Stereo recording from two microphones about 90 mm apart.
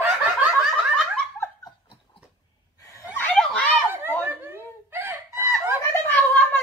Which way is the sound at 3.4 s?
10° left (ahead or behind).